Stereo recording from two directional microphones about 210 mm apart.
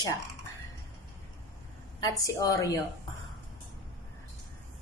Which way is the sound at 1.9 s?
15° left (ahead or behind).